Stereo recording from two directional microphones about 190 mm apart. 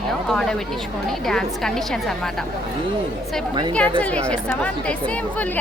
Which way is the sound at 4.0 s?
5° left (ahead or behind).